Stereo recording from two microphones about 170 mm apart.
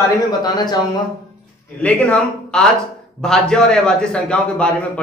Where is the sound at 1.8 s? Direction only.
5° left (ahead or behind).